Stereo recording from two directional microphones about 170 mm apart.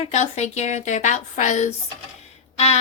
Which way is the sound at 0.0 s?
45° left (ahead or behind).